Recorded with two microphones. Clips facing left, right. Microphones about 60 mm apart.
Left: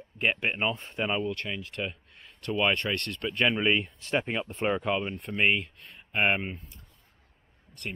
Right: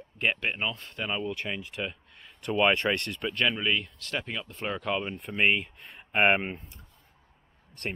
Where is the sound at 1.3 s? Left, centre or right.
Centre.